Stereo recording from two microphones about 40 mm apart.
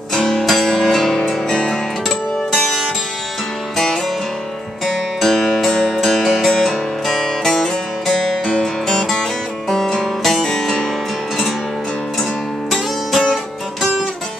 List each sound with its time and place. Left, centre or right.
0.1 s music: centre
1.5 s music: left
2.0 s music: centre
12.7 s music: centre
13.3 s guitar: centre